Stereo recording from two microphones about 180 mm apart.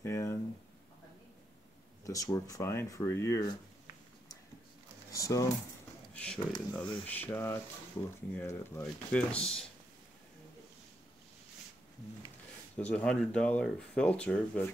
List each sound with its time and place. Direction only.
0.0 s a sound: 15° left (ahead or behind)
2.0 s speech: 20° left (ahead or behind)
5.1 s speech: 20° left (ahead or behind)
6.1 s speech: 5° left (ahead or behind)
12.7 s speech: 5° left (ahead or behind)